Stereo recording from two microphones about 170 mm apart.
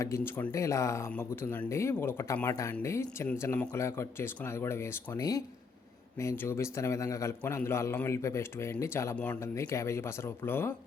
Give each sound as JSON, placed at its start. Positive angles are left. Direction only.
{"t": 0.0, "sound": "speech", "side_deg": 15}